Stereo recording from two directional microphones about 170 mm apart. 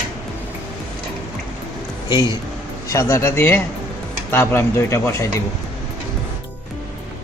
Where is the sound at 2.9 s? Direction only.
20° left (ahead or behind).